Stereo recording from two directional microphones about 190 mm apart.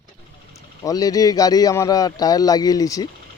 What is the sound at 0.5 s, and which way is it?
Speech, 15° left (ahead or behind).